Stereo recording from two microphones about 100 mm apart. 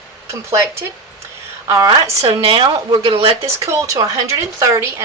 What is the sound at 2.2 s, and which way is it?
Speech, 60° right (ahead or behind).